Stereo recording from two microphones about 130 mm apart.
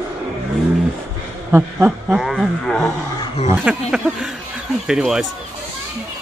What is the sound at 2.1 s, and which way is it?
Speech, centre (ahead or behind).